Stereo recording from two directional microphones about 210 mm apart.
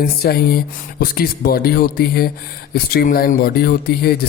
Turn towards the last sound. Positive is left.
turn(degrees=45)  # may be behind; listen again after turning